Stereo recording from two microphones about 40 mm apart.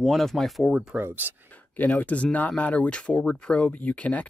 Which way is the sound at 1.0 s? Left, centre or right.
Right.